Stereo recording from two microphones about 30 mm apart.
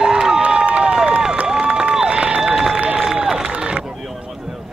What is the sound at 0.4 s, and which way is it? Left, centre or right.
Crowd, right.